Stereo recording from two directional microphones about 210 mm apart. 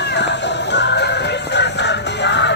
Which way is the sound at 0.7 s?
55° left (ahead or behind).